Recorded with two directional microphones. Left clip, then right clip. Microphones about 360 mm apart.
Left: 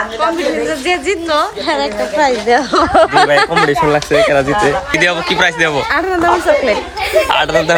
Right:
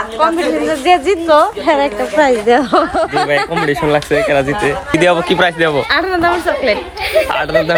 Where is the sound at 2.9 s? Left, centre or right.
Left.